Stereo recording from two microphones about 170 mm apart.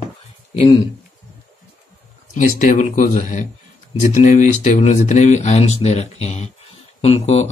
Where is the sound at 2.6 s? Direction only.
50° left (ahead or behind).